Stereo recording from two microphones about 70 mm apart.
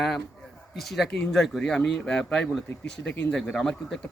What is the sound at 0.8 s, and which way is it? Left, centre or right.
A man's voice, centre.